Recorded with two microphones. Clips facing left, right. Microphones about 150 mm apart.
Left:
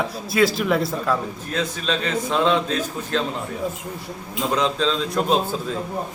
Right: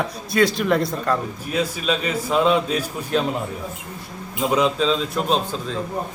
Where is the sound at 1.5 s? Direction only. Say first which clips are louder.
Right 2 dB; 10° right (ahead or behind).